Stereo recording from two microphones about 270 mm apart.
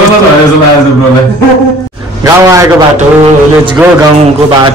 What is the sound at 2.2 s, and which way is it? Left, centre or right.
Speech, centre.